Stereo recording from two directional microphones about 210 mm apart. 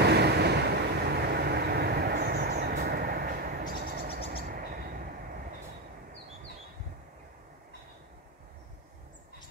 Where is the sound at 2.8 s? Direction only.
45° right (ahead or behind).